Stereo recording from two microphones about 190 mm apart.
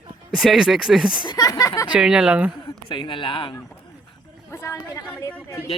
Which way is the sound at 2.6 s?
25° left (ahead or behind).